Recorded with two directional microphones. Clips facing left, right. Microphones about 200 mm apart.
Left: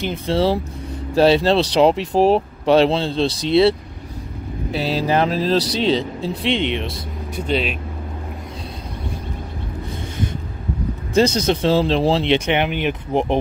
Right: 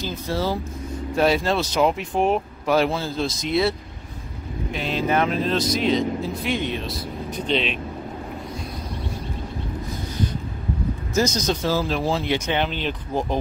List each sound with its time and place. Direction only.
0.3 s speech: 30° left (ahead or behind)
4.7 s speech: 35° left (ahead or behind)
6.6 s speech: 75° left (ahead or behind)
7.2 s speech: 10° left (ahead or behind)
11.1 s speech: 30° left (ahead or behind)
12.5 s speech: 15° left (ahead or behind)